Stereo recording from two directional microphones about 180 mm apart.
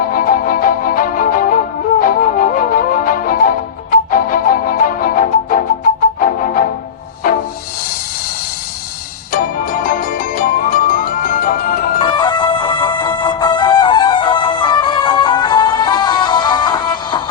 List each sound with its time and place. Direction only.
0.1 s music: 50° left (ahead or behind)
9.3 s music: 50° left (ahead or behind)
12.0 s music: 25° left (ahead or behind)